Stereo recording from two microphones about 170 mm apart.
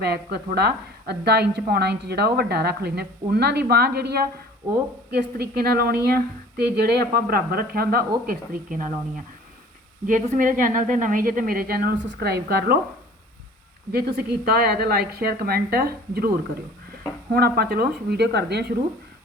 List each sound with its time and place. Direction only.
0.0 s a woman's voice: 70° right (ahead or behind)
8.3 s a woman's voice: 50° right (ahead or behind)
13.9 s a woman's voice: 70° right (ahead or behind)
17.3 s a woman's voice: 65° right (ahead or behind)